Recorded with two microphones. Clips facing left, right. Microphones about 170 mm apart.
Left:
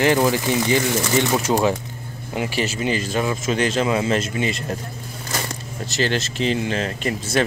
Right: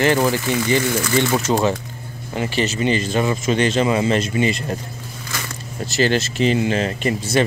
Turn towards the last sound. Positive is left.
turn(degrees=0)  # may be behind; listen again after turning